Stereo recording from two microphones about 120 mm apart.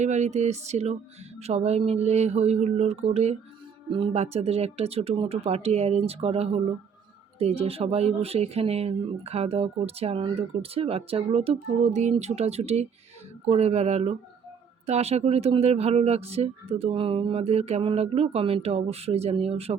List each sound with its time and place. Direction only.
0.0 s music: 75° right (ahead or behind)
1.4 s speech: 65° right (ahead or behind)
3.8 s speech: 45° right (ahead or behind)
4.1 s speech: 60° right (ahead or behind)
12.2 s speech: 65° right (ahead or behind)